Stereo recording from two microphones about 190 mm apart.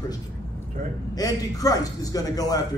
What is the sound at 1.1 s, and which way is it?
A man's voice, 20° left (ahead or behind).